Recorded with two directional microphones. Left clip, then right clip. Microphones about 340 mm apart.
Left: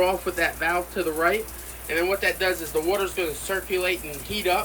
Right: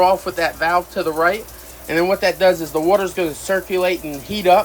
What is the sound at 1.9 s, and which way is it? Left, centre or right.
Speech, right.